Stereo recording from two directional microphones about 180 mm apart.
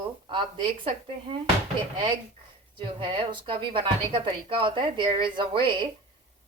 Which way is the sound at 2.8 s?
25° right (ahead or behind).